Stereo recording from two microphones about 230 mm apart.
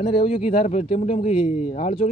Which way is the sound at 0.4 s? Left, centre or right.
Left.